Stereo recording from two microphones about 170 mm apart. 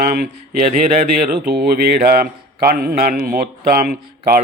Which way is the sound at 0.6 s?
45° right (ahead or behind).